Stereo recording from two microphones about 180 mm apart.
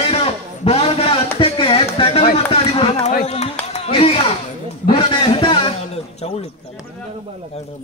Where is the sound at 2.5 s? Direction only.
30° left (ahead or behind).